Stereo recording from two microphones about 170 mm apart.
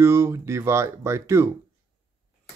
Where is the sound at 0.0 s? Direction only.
15° right (ahead or behind).